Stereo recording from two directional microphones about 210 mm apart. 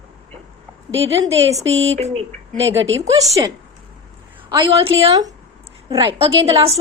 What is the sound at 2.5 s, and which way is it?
Speech, 65° right (ahead or behind).